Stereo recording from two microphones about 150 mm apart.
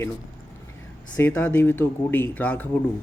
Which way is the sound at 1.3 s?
15° left (ahead or behind).